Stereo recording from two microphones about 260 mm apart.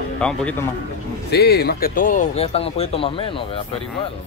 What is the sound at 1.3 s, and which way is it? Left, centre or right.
Speech, left.